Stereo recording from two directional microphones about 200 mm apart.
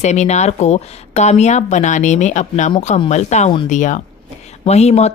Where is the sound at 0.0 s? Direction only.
35° left (ahead or behind).